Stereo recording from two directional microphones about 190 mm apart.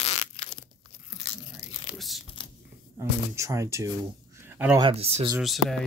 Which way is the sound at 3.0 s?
15° right (ahead or behind).